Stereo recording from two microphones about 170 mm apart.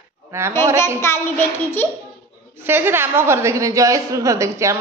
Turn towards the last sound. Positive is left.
turn(degrees=-15)  # may be behind; listen again after turning